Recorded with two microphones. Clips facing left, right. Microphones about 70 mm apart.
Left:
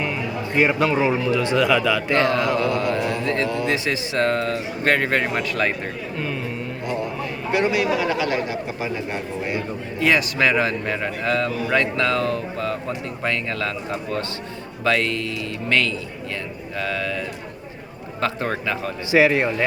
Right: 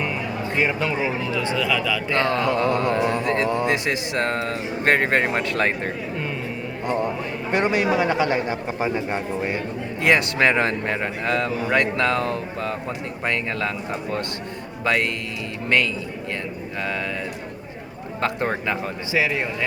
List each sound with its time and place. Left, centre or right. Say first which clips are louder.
0.5 s a man's voice: left 4 dB; centre
1.3 s speech: left 3 dB; right
1.5 s a man's voice: left 6 dB; centre
2.2 s speech: left 1 dB; right
7.5 s speech: even; right
16.8 s speech: left 2 dB; right
19.1 s speech: left 6 dB; left